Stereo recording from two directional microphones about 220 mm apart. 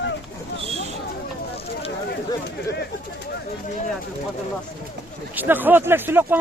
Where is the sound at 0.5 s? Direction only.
25° right (ahead or behind).